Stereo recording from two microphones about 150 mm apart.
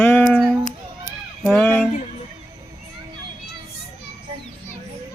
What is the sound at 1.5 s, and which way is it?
Speech, 15° left (ahead or behind).